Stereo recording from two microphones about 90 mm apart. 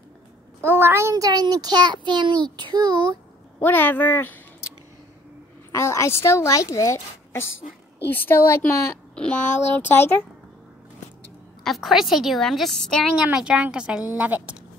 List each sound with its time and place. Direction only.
0.7 s a child's voice: 30° right (ahead or behind)
1.1 s a child's voice: 45° right (ahead or behind)
3.5 s speech: 20° left (ahead or behind)
5.7 s a woman's voice: 30° left (ahead or behind)
8.1 s speech: 25° left (ahead or behind)
9.1 s a sound: 10° left (ahead or behind)
9.4 s speech: 20° left (ahead or behind)
11.6 s a woman's voice: centre (ahead or behind)
13.3 s speech: 10° right (ahead or behind)